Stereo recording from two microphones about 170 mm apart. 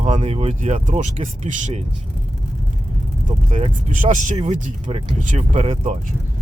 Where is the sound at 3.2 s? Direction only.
45° right (ahead or behind).